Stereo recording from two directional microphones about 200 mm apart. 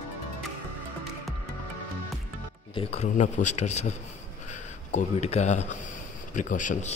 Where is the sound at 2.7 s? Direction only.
30° left (ahead or behind).